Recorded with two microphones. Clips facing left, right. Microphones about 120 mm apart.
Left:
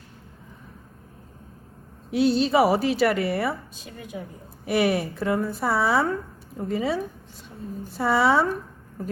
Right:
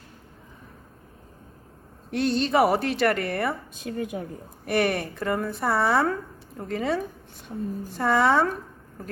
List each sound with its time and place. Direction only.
2.0 s speech: 5° left (ahead or behind)
3.8 s a woman's voice: 50° right (ahead or behind)
4.6 s speech: centre (ahead or behind)